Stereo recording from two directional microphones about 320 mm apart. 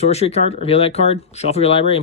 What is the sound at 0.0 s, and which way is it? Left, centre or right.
Speech, centre.